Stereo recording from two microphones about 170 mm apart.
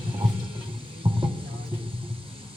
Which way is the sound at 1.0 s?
30° right (ahead or behind).